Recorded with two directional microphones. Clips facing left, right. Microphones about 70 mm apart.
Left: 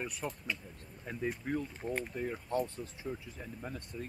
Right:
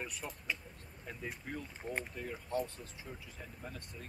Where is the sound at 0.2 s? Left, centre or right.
Centre.